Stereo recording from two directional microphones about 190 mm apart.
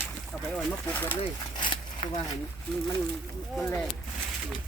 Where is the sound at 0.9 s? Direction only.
10° left (ahead or behind).